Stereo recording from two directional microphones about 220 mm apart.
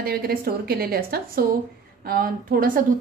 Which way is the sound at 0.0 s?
45° right (ahead or behind).